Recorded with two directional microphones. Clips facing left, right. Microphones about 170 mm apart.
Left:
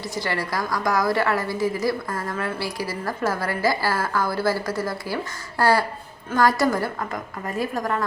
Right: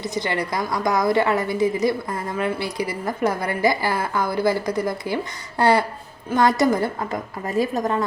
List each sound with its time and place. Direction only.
0.0 s a woman's voice: 20° right (ahead or behind)